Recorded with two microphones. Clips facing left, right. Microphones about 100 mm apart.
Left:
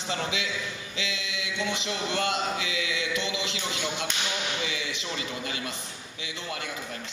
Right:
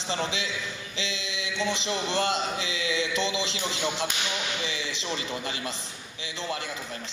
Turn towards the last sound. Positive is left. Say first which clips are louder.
# right 2 dB
turn(degrees=-30)  # may be behind; listen again after turning